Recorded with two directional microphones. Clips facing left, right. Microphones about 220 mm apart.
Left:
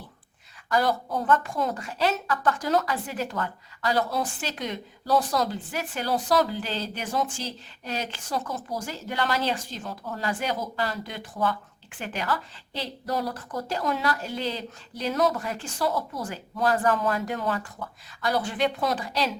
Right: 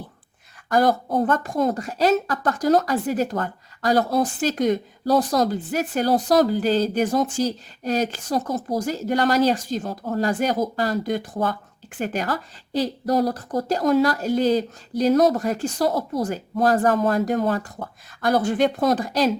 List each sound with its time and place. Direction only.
0.7 s a woman's voice: 50° right (ahead or behind)